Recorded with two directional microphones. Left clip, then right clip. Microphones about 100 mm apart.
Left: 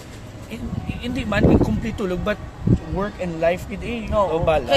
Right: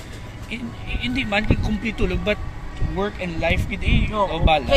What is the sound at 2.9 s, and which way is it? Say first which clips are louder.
Speech: left 1 dB; 55° left (ahead or behind).